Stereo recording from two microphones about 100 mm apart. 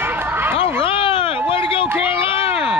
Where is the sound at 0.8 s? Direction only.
60° left (ahead or behind).